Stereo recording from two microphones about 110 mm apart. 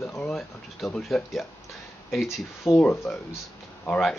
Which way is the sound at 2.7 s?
35° left (ahead or behind).